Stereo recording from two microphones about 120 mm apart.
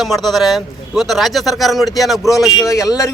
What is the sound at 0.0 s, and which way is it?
Speech, centre (ahead or behind).